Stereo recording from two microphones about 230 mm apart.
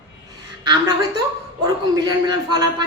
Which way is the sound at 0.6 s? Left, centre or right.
Centre.